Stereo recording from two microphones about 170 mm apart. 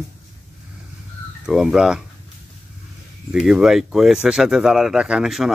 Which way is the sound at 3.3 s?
5° right (ahead or behind).